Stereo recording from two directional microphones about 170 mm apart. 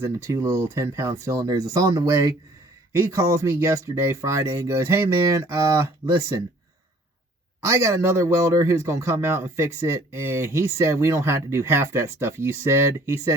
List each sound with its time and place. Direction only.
0.0 s a man's voice: 15° right (ahead or behind)
7.6 s a man's voice: 15° right (ahead or behind)